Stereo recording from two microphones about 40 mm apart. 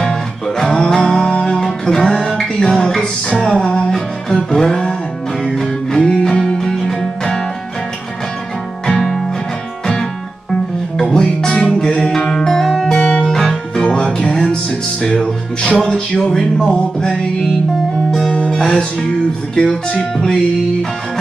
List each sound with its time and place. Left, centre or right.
0.0 s music: centre
3.6 s speech: left
4.6 s music: centre
8.9 s music: centre
11.0 s music: centre
12.3 s music: centre
13.8 s music: left
18.6 s music: centre
19.5 s speech: centre